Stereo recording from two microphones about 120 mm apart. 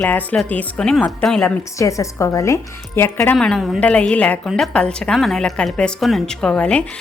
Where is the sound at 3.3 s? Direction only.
5° left (ahead or behind).